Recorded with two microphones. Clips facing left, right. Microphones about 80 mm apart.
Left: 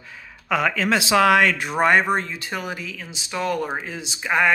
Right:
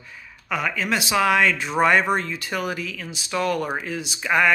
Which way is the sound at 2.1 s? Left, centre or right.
Left.